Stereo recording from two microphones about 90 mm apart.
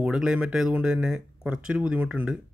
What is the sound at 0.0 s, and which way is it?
Speech, 5° right (ahead or behind).